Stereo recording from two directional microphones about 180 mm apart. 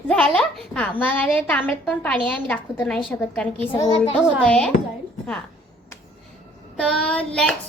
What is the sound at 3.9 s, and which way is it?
Speech, 30° left (ahead or behind).